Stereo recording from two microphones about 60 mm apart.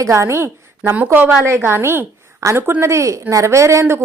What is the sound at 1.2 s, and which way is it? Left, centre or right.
A woman's voice, right.